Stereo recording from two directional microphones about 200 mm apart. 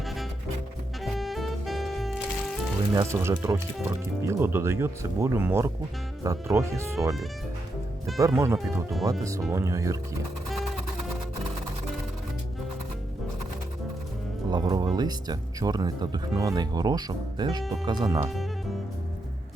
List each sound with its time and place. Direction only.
1.0 s music: centre (ahead or behind)
2.9 s speech: 15° right (ahead or behind)
8.2 s speech: 15° right (ahead or behind)
14.5 s speech: 20° right (ahead or behind)